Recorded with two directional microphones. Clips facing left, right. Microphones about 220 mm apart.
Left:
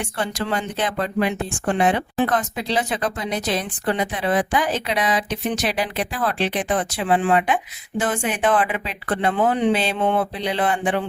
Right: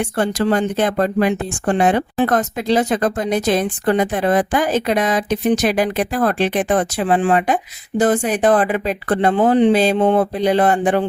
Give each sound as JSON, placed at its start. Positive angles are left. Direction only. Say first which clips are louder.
{"t": 0.0, "sound": "speech", "louder": "right 8 dB", "side_deg": -45}